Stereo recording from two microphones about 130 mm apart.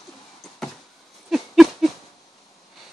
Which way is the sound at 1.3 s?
Centre (ahead or behind).